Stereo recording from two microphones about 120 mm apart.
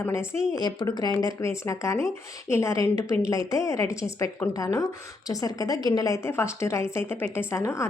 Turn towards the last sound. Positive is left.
turn(degrees=25)  # may be behind; listen again after turning